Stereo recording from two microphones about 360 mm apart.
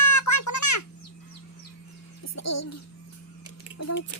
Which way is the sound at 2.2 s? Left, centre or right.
Left.